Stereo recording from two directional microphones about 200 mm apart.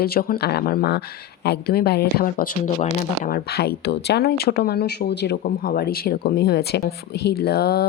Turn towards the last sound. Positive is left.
turn(degrees=50)  # may be behind; listen again after turning